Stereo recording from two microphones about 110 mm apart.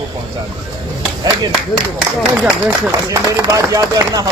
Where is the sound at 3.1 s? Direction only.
30° right (ahead or behind).